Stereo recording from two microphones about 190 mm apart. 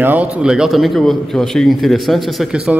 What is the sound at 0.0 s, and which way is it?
A man's voice, 10° right (ahead or behind).